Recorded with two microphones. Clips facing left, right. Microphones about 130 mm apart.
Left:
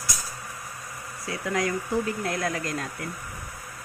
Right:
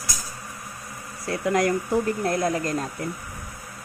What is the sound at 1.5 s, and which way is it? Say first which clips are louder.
Speech: right 5 dB; 60° right (ahead or behind).